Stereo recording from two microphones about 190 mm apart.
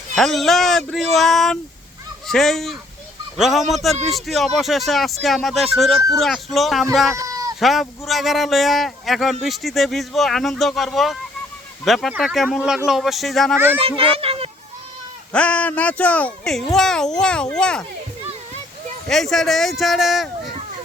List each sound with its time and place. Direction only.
0.2 s speech: centre (ahead or behind)
7.2 s cat: 20° right (ahead or behind)
7.6 s speech: centre (ahead or behind)
13.8 s a child's voice: 30° right (ahead or behind)
15.3 s speech: 5° left (ahead or behind)
19.0 s speech: centre (ahead or behind)